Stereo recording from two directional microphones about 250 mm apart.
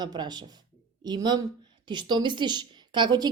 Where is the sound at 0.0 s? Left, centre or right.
Centre.